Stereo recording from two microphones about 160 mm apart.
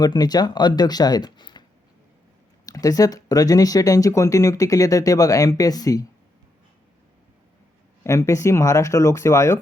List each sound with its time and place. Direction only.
0.0 s speech: 25° left (ahead or behind)
2.6 s speech: 20° left (ahead or behind)
8.0 s speech: 20° left (ahead or behind)